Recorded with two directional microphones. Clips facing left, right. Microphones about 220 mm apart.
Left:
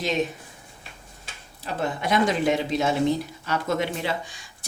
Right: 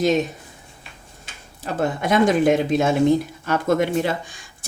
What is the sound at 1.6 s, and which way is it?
Speech, 50° right (ahead or behind).